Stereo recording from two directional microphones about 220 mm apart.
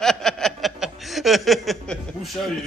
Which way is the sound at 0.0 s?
Centre (ahead or behind).